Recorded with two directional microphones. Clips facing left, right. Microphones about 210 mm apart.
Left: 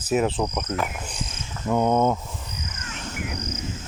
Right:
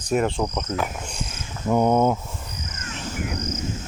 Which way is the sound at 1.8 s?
10° right (ahead or behind).